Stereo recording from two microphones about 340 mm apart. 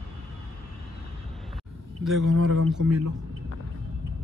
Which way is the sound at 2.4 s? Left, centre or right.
Right.